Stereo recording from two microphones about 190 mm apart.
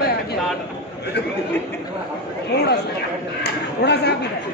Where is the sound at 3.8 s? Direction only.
60° left (ahead or behind).